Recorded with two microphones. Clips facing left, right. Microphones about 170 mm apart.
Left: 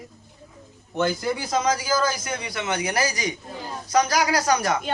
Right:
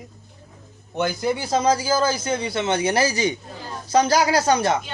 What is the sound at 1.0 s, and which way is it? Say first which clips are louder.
A man's voice: right 1 dB; 25° right (ahead or behind).